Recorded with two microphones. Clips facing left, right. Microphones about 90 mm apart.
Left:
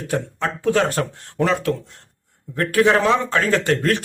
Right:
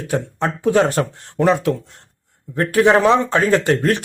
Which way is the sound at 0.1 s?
20° right (ahead or behind).